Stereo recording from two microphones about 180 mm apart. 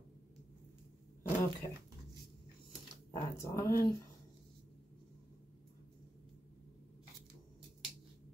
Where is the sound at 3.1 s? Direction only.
20° left (ahead or behind).